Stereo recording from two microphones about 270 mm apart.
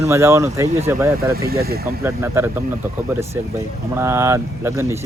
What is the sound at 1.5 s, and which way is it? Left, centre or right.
Speech, right.